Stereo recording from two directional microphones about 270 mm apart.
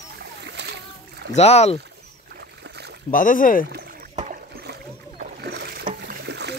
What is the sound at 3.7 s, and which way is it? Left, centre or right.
Rowboat, right.